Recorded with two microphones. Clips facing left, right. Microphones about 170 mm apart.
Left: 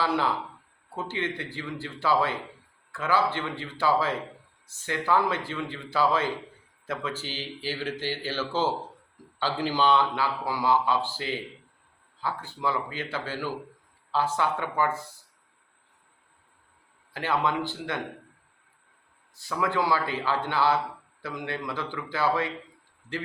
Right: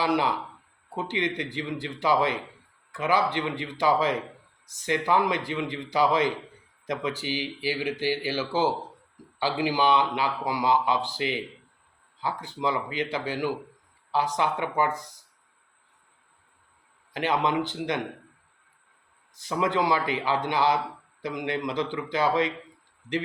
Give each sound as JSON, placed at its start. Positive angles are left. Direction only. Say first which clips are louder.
{"t": 0.0, "sound": "a man's voice", "louder": "right 2 dB", "side_deg": -15}
{"t": 17.2, "sound": "speech", "louder": "right 2 dB", "side_deg": -20}
{"t": 19.4, "sound": "a man's voice", "louder": "right 2 dB", "side_deg": -20}